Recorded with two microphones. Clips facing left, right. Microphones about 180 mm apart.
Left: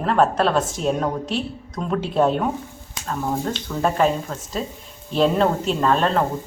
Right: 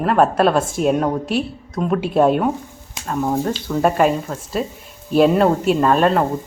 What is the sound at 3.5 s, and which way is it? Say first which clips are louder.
A woman's voice: right 3 dB; 10° right (ahead or behind).